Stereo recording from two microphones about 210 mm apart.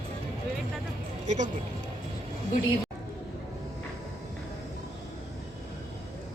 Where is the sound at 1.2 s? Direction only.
35° right (ahead or behind).